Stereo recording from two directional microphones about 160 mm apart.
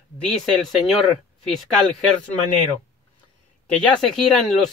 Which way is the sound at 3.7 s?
5° left (ahead or behind).